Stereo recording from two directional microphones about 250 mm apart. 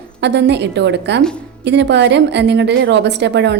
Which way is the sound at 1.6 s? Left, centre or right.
Right.